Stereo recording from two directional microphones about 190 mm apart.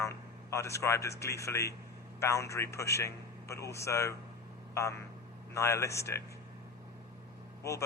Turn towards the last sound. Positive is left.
turn(degrees=15)  # may be behind; listen again after turning